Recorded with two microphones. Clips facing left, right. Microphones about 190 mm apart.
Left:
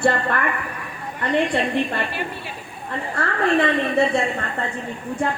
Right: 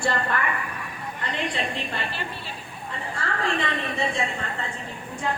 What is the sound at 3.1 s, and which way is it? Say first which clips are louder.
Speech: left 8 dB; 60° left (ahead or behind).